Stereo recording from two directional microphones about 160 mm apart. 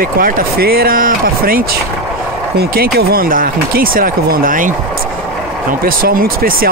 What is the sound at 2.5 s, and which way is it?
Speech, 75° right (ahead or behind).